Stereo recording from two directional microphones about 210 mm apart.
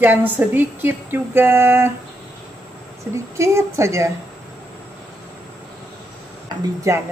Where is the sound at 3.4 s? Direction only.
15° right (ahead or behind).